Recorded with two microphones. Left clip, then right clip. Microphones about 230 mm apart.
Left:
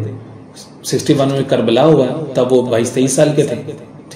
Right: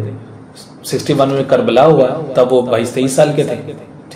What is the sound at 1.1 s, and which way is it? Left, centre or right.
A man's voice, left.